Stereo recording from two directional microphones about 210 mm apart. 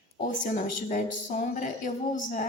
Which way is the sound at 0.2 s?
40° left (ahead or behind).